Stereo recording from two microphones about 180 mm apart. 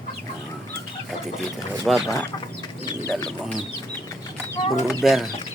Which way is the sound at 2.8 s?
20° left (ahead or behind).